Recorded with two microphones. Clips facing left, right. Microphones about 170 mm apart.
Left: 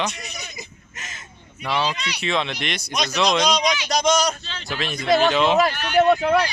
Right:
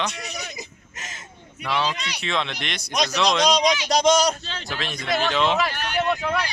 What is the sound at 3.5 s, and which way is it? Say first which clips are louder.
Speech: right 2 dB; 35° right (ahead or behind).